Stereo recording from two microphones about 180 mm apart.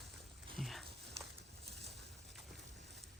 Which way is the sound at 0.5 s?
Centre (ahead or behind).